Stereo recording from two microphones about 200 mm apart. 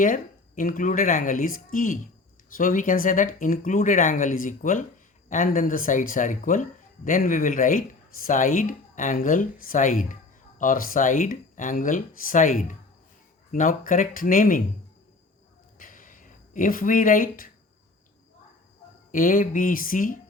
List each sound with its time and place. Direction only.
0.0 s speech: 45° left (ahead or behind)
15.8 s a sound: 40° left (ahead or behind)
19.1 s speech: 45° left (ahead or behind)